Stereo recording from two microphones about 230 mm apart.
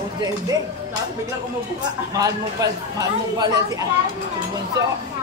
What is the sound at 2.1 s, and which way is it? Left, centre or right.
Speech, centre.